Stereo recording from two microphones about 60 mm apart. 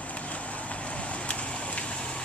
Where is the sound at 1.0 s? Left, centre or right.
Left.